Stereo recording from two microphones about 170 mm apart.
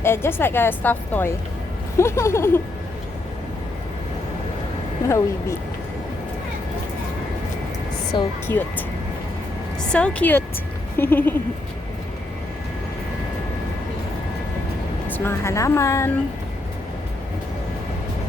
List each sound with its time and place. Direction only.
0.0 s a woman's voice: 15° left (ahead or behind)
5.0 s a woman's voice: 15° left (ahead or behind)
8.1 s speech: 25° left (ahead or behind)
8.5 s a woman's voice: 15° left (ahead or behind)
9.9 s a woman's voice: 5° left (ahead or behind)
15.0 s a woman's voice: 10° left (ahead or behind)